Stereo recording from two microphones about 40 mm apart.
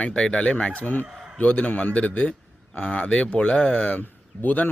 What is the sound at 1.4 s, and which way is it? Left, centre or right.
Speech, left.